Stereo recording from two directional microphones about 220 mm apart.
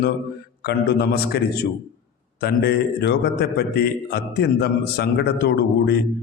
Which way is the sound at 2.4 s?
45° left (ahead or behind).